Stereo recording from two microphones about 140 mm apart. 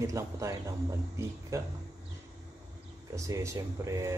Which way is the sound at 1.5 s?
20° right (ahead or behind).